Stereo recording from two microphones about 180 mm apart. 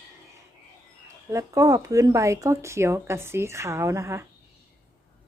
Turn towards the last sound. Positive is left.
turn(degrees=-15)  # may be behind; listen again after turning